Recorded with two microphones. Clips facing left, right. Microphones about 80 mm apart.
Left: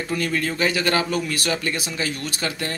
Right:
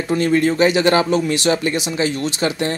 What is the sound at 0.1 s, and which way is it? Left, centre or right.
Speech, right.